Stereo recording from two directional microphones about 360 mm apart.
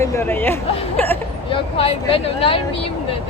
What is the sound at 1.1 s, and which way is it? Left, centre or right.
Speech, centre.